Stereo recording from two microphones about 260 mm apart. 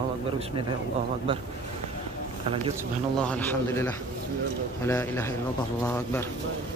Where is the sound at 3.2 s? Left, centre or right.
Centre.